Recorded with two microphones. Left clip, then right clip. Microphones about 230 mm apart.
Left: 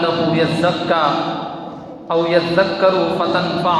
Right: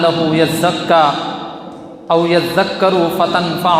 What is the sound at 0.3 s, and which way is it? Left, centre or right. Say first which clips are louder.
Speech: right 3 dB; right.